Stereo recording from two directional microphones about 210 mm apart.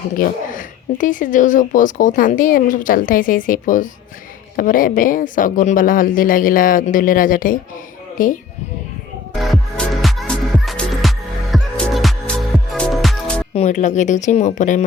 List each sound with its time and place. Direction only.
0.2 s speech: 40° left (ahead or behind)
9.3 s music: centre (ahead or behind)
13.5 s speech: 30° left (ahead or behind)